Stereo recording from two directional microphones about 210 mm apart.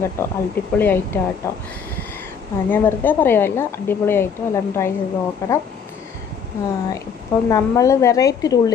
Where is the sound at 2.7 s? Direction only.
10° left (ahead or behind).